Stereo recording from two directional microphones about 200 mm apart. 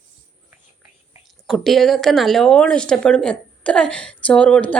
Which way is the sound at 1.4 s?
Centre (ahead or behind).